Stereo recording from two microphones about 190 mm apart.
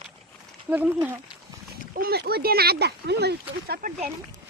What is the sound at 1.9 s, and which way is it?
Speech, 55° right (ahead or behind).